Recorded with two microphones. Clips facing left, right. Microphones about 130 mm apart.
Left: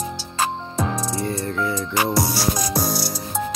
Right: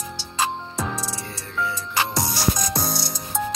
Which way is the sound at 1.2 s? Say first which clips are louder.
Left 5 dB; 45° left (ahead or behind).